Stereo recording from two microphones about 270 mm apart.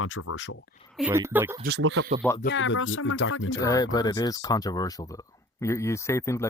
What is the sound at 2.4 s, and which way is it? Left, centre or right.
Speech, left.